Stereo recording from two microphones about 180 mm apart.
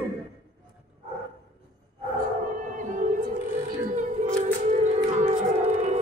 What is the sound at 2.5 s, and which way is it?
Music, 45° right (ahead or behind).